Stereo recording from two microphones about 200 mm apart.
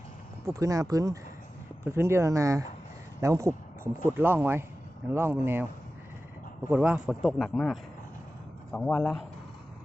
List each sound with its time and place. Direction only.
0.4 s speech: 15° right (ahead or behind)
6.7 s a man's voice: 5° right (ahead or behind)